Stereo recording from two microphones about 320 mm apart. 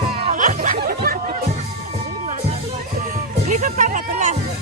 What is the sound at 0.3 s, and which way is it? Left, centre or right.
Snicker, right.